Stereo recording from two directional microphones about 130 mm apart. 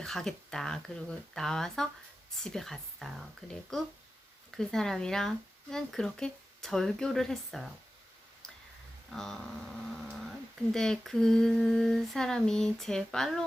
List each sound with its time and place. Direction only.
0.0 s humming: 5° left (ahead or behind)
9.0 s humming: 5° left (ahead or behind)